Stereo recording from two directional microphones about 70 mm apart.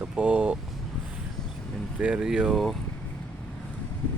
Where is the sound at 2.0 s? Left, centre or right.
Centre.